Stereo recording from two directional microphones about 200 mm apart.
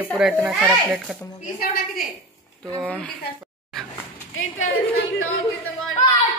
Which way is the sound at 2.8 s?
5° left (ahead or behind).